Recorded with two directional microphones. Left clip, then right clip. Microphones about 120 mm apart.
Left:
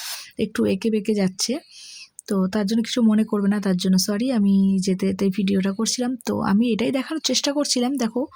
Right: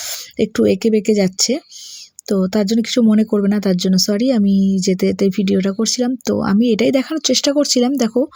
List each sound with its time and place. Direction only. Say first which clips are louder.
0.0 s speech: right 7 dB; 25° right (ahead or behind)